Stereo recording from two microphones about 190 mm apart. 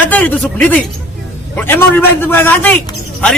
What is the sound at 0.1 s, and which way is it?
A man's voice, 10° left (ahead or behind).